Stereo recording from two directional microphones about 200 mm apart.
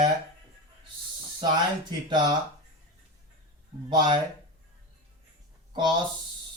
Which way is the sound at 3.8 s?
20° right (ahead or behind).